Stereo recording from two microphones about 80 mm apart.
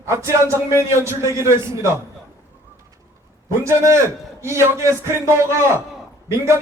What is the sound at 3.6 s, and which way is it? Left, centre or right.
A man's voice, right.